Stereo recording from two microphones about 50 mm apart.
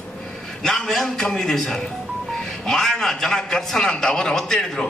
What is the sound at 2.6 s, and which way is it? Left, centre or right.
A man's voice, centre.